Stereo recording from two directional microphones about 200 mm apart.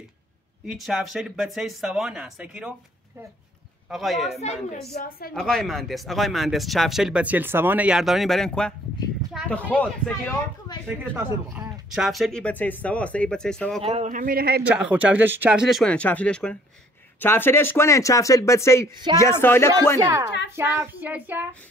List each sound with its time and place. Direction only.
0.7 s speech: centre (ahead or behind)
3.9 s speech: centre (ahead or behind)
4.8 s a woman's voice: 50° left (ahead or behind)
5.3 s speech: centre (ahead or behind)
10.9 s speech: 10° right (ahead or behind)
13.8 s a man's voice: 35° right (ahead or behind)
14.6 s speech: 5° right (ahead or behind); by 19.7 s 10° left (ahead or behind)
20.0 s child singing: 15° right (ahead or behind)
20.2 s a child's voice: 60° left (ahead or behind)
20.5 s child singing: 10° right (ahead or behind)